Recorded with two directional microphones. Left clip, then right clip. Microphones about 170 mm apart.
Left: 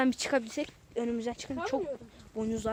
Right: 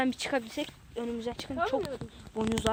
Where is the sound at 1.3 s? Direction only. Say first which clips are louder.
Right 3 dB; 30° left (ahead or behind).